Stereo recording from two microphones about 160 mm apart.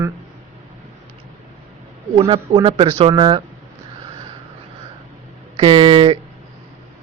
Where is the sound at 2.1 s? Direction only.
35° right (ahead or behind).